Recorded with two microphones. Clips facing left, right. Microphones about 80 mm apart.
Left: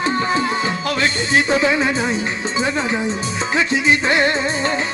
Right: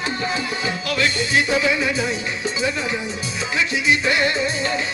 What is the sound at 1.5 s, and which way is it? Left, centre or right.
Music, left.